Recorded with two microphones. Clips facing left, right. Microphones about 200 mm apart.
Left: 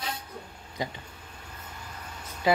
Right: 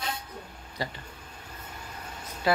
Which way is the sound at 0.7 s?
20° left (ahead or behind).